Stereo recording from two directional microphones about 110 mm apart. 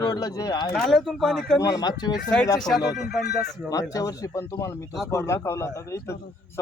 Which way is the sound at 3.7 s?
30° left (ahead or behind).